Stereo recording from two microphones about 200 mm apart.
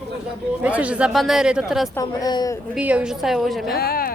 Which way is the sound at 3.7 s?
50° left (ahead or behind).